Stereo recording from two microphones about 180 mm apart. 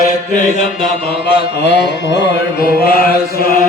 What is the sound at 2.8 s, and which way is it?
Mantra, 55° left (ahead or behind).